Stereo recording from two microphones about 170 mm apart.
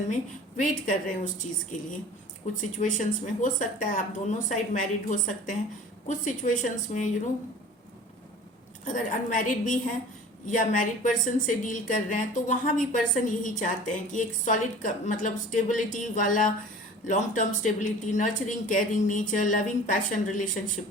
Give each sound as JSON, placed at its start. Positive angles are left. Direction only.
{"t": 0.5, "sound": "a woman's voice", "side_deg": 50}
{"t": 8.8, "sound": "a woman's voice", "side_deg": 50}